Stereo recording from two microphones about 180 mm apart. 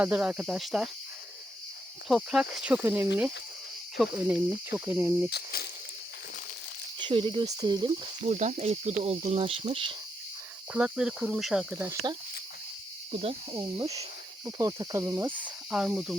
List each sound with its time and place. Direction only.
0.0 s speech: 5° right (ahead or behind)
2.0 s speech: centre (ahead or behind)
4.1 s speech: 15° right (ahead or behind)
5.3 s speech: 60° left (ahead or behind)
7.0 s speech: 25° right (ahead or behind)
8.2 s speech: 40° right (ahead or behind)
10.7 s speech: 5° right (ahead or behind)
13.5 s speech: 20° right (ahead or behind); by 16.1 s 5° right (ahead or behind)